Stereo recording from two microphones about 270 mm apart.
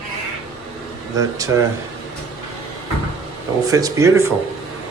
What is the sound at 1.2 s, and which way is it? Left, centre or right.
Speech, centre.